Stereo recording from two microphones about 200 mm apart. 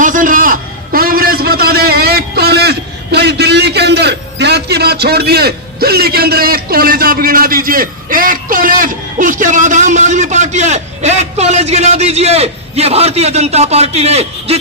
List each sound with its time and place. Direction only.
0.0 s a man's voice: 40° right (ahead or behind)